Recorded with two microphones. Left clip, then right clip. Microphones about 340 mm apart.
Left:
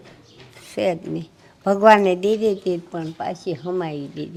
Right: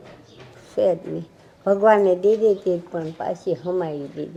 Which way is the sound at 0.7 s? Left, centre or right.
Left.